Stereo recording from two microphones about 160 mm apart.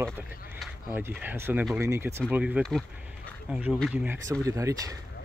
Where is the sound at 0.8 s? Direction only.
15° right (ahead or behind).